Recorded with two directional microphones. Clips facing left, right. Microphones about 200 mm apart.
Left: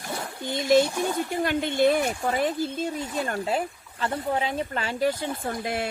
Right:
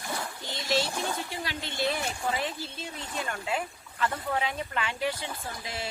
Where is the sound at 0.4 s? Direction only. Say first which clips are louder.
Left 10 dB; 50° left (ahead or behind).